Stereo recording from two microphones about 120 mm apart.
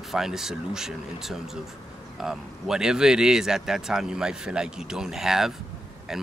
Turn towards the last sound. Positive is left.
turn(degrees=-5)  # may be behind; listen again after turning